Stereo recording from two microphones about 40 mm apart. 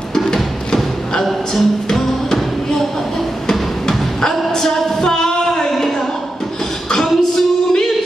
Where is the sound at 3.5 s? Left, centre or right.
Centre.